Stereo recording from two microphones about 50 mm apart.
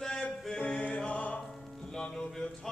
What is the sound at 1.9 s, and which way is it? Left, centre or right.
Music, centre.